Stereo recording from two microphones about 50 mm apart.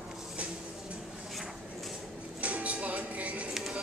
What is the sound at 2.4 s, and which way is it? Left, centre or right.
Music, right.